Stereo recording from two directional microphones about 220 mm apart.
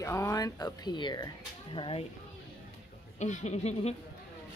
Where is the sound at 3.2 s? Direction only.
30° left (ahead or behind).